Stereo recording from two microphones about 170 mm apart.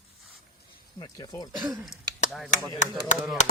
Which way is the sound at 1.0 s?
25° left (ahead or behind).